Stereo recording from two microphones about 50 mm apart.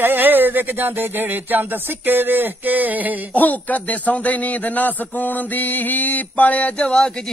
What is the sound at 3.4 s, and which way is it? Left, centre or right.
A man's voice, left.